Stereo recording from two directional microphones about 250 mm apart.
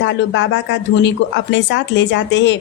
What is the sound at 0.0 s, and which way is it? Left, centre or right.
A woman's voice, left.